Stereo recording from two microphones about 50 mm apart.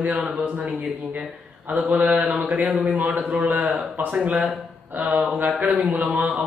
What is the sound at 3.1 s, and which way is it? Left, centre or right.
Speech, right.